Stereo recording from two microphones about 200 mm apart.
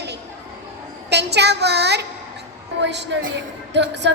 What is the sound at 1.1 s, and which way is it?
A woman's voice, 55° right (ahead or behind).